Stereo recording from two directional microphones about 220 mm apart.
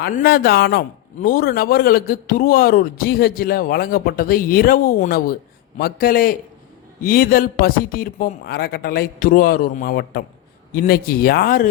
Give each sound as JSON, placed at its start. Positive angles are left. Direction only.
{"t": 0.0, "sound": "a man's voice", "side_deg": 45}